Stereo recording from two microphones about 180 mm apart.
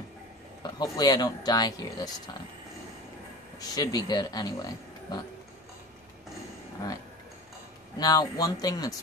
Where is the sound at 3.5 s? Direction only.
20° left (ahead or behind).